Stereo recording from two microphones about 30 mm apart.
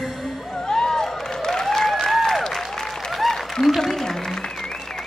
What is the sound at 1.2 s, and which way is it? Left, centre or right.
Applause, centre.